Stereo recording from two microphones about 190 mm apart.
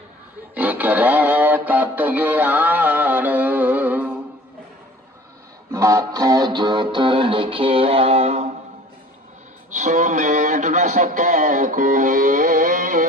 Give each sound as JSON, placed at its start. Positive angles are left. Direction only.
{"t": 0.5, "sound": "music", "side_deg": -10}
{"t": 5.7, "sound": "music", "side_deg": -15}
{"t": 9.7, "sound": "speech", "side_deg": -40}